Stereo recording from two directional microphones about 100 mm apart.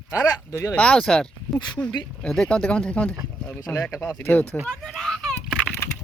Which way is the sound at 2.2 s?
5° left (ahead or behind).